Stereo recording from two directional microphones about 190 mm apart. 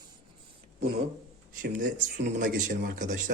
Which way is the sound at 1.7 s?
45° right (ahead or behind).